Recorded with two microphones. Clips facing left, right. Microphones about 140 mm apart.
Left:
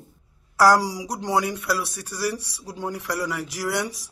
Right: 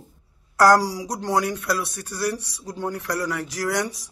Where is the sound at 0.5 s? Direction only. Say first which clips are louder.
Right 1 dB; 10° left (ahead or behind).